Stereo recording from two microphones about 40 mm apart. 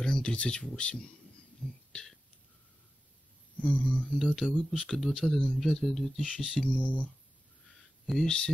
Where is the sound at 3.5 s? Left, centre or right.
Left.